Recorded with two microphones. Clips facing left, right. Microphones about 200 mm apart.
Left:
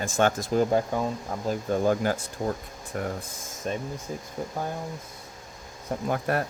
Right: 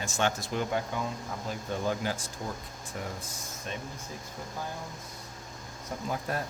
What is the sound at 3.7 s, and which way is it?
Speech, 40° left (ahead or behind).